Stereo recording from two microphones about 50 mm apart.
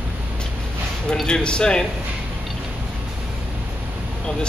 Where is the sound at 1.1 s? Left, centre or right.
Centre.